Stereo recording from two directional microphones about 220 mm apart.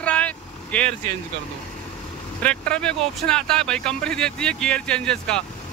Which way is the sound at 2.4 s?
5° left (ahead or behind).